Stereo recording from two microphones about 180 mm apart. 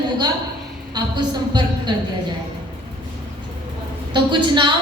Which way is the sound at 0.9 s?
25° right (ahead or behind).